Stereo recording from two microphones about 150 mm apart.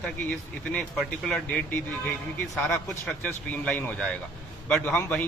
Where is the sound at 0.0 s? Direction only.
5° left (ahead or behind).